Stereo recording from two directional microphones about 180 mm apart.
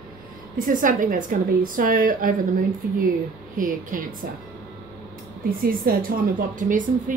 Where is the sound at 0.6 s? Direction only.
50° right (ahead or behind).